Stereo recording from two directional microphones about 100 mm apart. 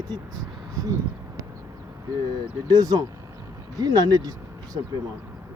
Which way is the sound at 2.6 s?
40° right (ahead or behind).